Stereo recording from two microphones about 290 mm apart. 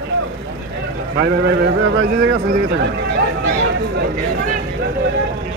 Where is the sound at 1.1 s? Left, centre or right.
Right.